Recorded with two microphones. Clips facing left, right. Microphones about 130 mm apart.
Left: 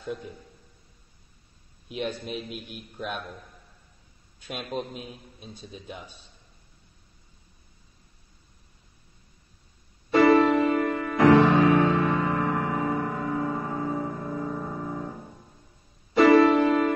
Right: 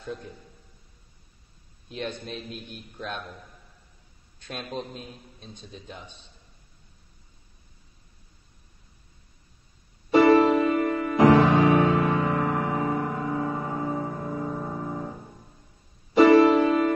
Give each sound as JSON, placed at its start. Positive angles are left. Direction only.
{"t": 0.0, "sound": "a man's voice", "side_deg": 5}
{"t": 1.9, "sound": "a man's voice", "side_deg": 10}
{"t": 4.4, "sound": "a man's voice", "side_deg": 10}
{"t": 10.1, "sound": "music", "side_deg": -25}
{"t": 11.8, "sound": "music", "side_deg": -5}
{"t": 12.1, "sound": "music", "side_deg": -15}
{"t": 16.2, "sound": "music", "side_deg": -25}
{"t": 16.4, "sound": "music", "side_deg": -5}